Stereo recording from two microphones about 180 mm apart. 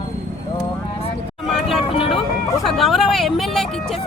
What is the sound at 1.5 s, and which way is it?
Music, centre (ahead or behind).